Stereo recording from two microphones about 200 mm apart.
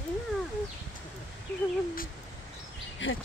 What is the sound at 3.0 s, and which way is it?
Speech, 70° left (ahead or behind).